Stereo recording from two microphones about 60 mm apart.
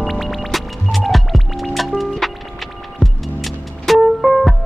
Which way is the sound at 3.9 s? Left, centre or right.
Centre.